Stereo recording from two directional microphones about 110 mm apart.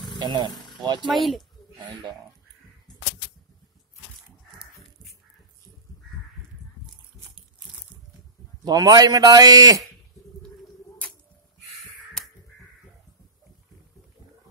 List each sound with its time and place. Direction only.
0.2 s speech: 40° right (ahead or behind)
1.0 s speech: centre (ahead or behind)
8.6 s a man's voice: 40° right (ahead or behind)